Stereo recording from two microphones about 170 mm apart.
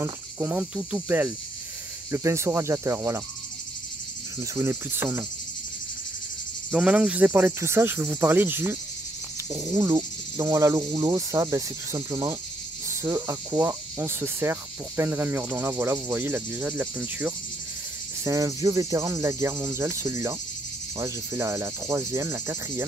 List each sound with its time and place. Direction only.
0.0 s speech: 10° right (ahead or behind)
4.4 s speech: 15° right (ahead or behind)
6.7 s speech: 5° right (ahead or behind)